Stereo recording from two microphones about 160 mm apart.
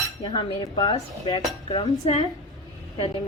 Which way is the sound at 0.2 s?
30° left (ahead or behind).